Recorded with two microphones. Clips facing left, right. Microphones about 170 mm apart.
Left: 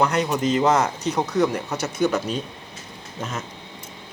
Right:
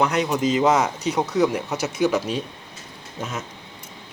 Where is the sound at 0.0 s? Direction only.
Centre (ahead or behind).